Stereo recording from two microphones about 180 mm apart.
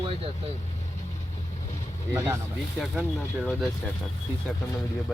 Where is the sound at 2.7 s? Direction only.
5° right (ahead or behind).